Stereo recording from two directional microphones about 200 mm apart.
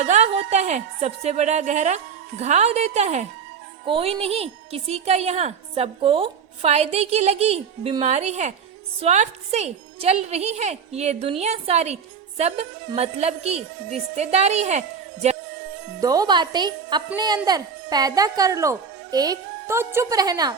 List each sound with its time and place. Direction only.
0.0 s a woman's voice: 35° right (ahead or behind)
16.0 s speech: 20° right (ahead or behind)